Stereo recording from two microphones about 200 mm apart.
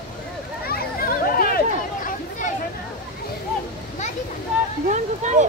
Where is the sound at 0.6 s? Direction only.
50° left (ahead or behind).